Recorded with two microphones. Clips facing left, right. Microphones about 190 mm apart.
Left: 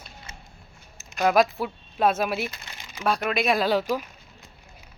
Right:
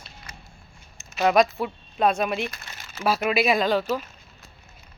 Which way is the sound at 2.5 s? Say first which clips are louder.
Right 1 dB; 15° left (ahead or behind).